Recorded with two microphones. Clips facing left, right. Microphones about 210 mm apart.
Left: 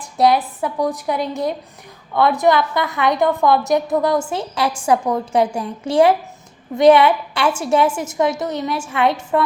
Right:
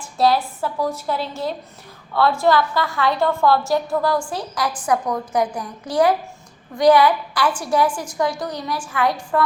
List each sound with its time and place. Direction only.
0.2 s a woman's voice: 20° left (ahead or behind)